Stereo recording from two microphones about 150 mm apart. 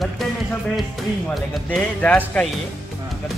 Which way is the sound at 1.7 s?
5° left (ahead or behind).